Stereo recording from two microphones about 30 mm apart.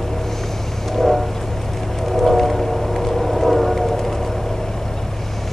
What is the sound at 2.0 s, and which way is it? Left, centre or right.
Vehicle, centre.